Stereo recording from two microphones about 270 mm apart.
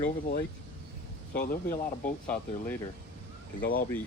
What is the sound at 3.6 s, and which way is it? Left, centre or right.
Speech, left.